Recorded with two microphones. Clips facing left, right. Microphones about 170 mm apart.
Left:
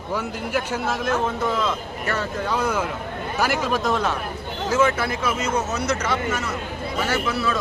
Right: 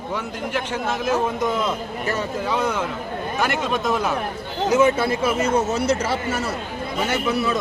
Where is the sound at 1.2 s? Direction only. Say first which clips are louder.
Right 1 dB; 20° right (ahead or behind).